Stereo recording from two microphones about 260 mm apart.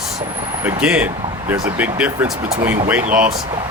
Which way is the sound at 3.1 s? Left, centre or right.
Right.